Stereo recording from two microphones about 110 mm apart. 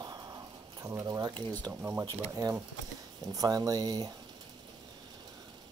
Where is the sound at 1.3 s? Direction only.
15° left (ahead or behind).